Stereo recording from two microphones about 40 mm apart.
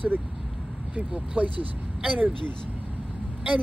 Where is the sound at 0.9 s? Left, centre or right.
Right.